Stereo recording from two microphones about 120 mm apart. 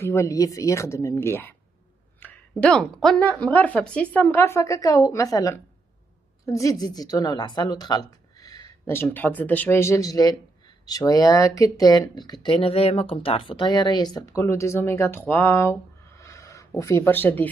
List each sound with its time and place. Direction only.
0.0 s a woman's voice: 25° left (ahead or behind)
8.8 s speech: 20° left (ahead or behind); by 12.4 s 35° left (ahead or behind)
12.4 s speech: 50° left (ahead or behind); by 14.4 s 35° left (ahead or behind)
14.4 s speech: 20° left (ahead or behind)